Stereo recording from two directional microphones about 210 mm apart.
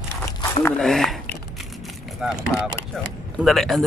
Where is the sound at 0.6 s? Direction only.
Centre (ahead or behind).